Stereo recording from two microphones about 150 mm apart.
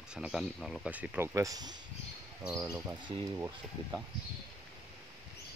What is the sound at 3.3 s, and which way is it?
Speech, 15° right (ahead or behind).